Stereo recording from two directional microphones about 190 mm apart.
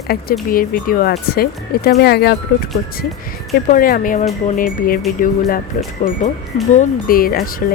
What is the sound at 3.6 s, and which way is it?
A woman's voice, 50° left (ahead or behind).